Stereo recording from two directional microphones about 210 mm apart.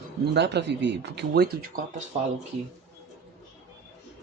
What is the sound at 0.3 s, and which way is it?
Speech, 55° right (ahead or behind).